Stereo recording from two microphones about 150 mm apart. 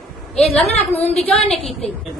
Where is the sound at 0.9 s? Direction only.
45° left (ahead or behind).